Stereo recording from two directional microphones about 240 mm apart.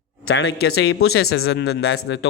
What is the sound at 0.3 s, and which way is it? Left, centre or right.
Speech, left.